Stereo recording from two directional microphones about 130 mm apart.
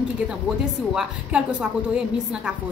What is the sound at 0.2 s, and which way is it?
A woman's voice, 10° right (ahead or behind).